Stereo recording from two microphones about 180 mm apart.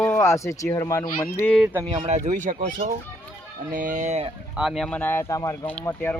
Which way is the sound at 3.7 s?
45° right (ahead or behind).